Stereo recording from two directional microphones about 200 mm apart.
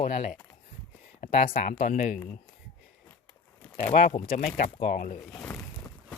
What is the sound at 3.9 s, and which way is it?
Speech, 40° left (ahead or behind).